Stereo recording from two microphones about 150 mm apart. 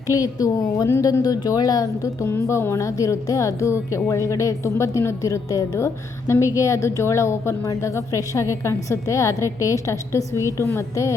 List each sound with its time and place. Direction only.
0.1 s a woman's voice: 20° left (ahead or behind)